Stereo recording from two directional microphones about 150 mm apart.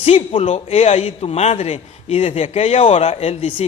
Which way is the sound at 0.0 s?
40° left (ahead or behind).